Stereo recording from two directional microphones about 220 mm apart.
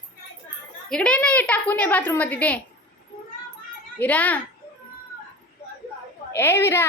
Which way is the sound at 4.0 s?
5° left (ahead or behind).